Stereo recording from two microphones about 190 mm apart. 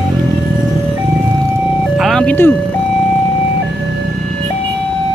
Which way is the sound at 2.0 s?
5° left (ahead or behind).